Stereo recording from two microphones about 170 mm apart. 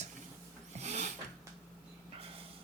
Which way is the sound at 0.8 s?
40° right (ahead or behind).